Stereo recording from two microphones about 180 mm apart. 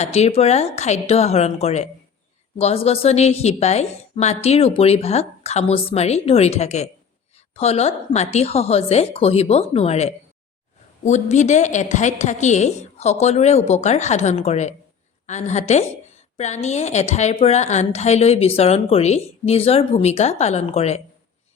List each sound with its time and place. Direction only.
0.0 s a woman's voice: 35° left (ahead or behind)